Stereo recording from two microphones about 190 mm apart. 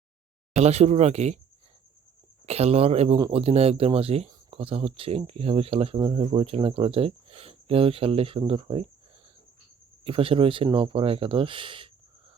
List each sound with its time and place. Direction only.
0.5 s speech: 35° right (ahead or behind)
2.5 s speech: 35° right (ahead or behind)
10.0 s speech: 30° right (ahead or behind)